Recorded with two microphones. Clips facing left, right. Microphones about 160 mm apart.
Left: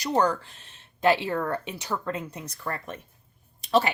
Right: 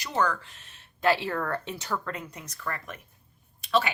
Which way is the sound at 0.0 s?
35° left (ahead or behind).